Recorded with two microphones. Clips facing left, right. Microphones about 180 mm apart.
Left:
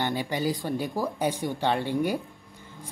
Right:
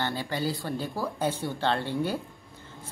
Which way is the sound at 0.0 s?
15° left (ahead or behind).